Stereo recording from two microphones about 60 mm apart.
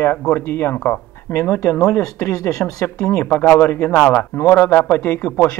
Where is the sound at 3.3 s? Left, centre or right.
Left.